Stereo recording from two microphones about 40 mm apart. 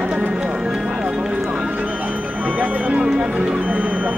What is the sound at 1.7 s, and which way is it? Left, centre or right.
Music, right.